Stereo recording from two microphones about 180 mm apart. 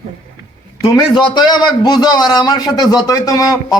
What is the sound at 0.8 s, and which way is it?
A man's voice, 25° left (ahead or behind).